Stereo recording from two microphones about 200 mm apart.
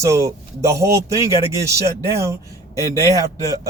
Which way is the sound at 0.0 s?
15° right (ahead or behind).